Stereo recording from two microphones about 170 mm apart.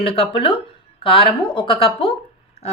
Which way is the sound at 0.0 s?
35° left (ahead or behind).